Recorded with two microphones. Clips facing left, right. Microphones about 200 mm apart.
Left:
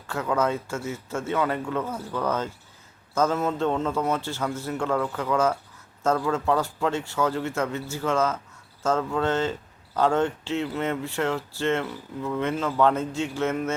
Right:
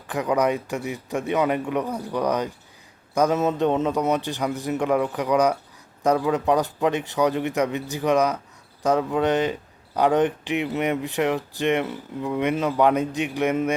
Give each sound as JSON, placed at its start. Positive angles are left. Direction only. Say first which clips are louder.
{"t": 0.1, "sound": "speech", "louder": "right 3 dB", "side_deg": -15}